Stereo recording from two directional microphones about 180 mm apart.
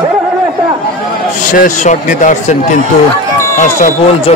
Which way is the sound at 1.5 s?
45° left (ahead or behind).